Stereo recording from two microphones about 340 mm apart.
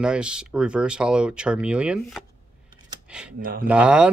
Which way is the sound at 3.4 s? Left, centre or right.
Right.